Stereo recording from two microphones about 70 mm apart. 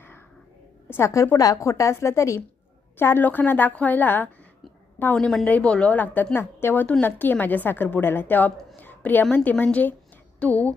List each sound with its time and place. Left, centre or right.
0.9 s a woman's voice: left
1.1 s a woman's voice: left
3.0 s a woman's voice: left
5.1 s a woman's voice: centre
5.5 s a woman's voice: centre
6.3 s a woman's voice: left
8.7 s a sound: left
9.3 s a woman's voice: left